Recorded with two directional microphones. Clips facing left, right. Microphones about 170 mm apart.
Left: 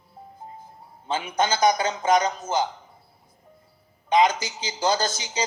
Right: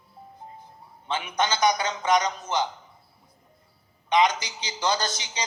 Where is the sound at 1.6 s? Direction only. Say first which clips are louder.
Left 3 dB; 40° left (ahead or behind).